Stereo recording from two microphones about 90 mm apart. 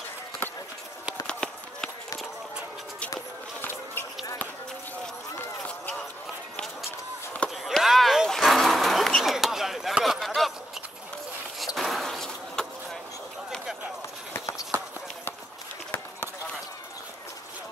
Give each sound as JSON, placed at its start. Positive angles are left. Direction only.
{"t": 1.2, "sound": "run", "side_deg": 10}
{"t": 5.6, "sound": "run", "side_deg": 10}
{"t": 7.4, "sound": "a sound", "side_deg": 0}
{"t": 11.6, "sound": "vehicle", "side_deg": 0}
{"t": 14.3, "sound": "run", "side_deg": 35}